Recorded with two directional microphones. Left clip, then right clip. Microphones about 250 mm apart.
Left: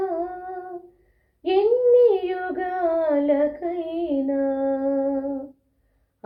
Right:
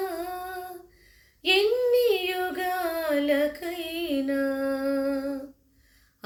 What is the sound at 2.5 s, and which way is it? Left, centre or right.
Music, right.